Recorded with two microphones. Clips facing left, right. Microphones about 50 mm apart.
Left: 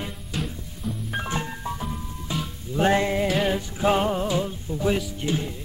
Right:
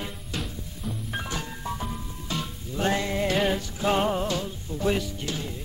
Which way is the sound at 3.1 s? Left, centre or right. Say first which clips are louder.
Left 1 dB; centre.